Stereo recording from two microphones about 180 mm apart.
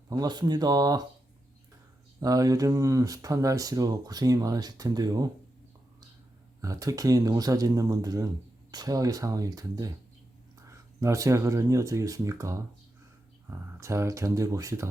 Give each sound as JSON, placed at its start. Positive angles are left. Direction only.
{"t": 0.1, "sound": "speech", "side_deg": -20}
{"t": 2.2, "sound": "speech", "side_deg": -20}
{"t": 6.6, "sound": "speech", "side_deg": -20}